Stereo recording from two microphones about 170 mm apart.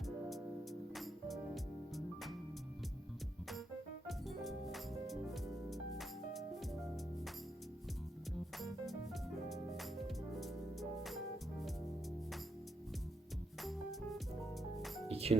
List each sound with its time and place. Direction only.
0.0 s music: centre (ahead or behind)
4.0 s music: centre (ahead or behind)
8.5 s music: centre (ahead or behind)
13.6 s music: centre (ahead or behind)
15.0 s music: 35° right (ahead or behind)